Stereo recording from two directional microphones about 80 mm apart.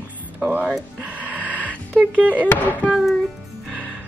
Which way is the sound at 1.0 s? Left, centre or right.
Centre.